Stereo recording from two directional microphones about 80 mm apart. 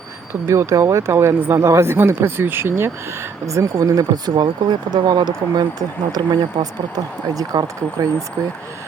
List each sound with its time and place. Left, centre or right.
0.4 s speech: right
4.4 s speech: right